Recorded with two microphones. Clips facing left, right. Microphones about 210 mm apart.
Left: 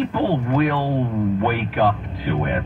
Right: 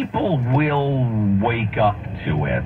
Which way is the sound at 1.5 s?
40° left (ahead or behind).